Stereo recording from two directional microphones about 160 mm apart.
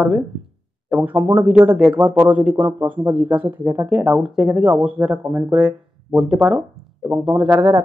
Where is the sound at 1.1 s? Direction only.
10° right (ahead or behind).